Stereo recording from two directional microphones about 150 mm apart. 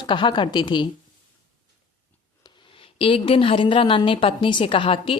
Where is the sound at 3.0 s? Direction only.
40° left (ahead or behind).